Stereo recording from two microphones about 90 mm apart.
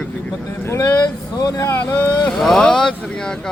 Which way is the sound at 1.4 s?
45° left (ahead or behind).